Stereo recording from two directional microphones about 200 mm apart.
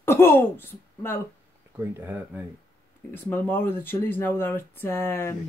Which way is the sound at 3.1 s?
10° left (ahead or behind).